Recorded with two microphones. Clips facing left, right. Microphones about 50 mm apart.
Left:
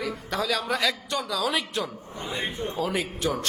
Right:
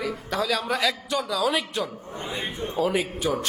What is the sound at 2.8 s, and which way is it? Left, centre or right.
Speech, centre.